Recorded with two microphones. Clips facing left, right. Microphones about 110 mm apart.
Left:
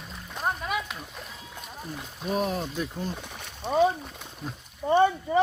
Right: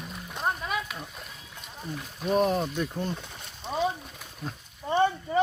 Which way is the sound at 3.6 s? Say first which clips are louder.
Left 7 dB; 50° left (ahead or behind).